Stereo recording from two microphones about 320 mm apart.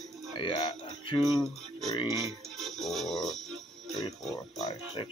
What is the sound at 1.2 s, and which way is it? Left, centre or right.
Music, centre.